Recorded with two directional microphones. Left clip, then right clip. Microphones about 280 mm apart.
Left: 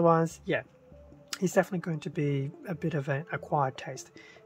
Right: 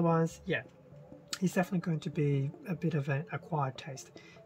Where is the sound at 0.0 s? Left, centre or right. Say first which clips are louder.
Left 6 dB; centre.